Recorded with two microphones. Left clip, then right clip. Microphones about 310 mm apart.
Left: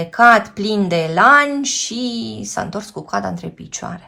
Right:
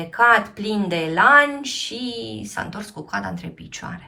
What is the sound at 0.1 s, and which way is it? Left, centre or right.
A woman's voice, centre.